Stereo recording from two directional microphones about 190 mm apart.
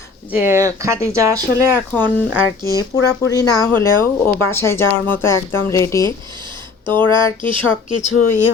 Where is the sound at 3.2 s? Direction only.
20° left (ahead or behind).